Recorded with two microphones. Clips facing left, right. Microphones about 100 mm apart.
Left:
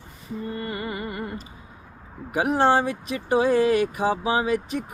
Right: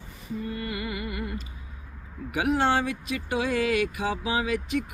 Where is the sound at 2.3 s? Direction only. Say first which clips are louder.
Left 4 dB; 35° left (ahead or behind).